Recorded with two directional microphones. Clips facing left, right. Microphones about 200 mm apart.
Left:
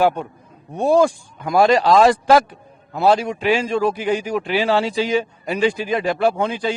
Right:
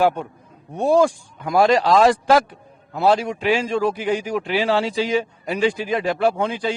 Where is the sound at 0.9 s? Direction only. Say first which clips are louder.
Left 1 dB; 10° left (ahead or behind).